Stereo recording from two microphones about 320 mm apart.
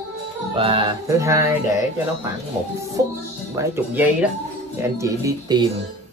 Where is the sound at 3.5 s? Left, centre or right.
Centre.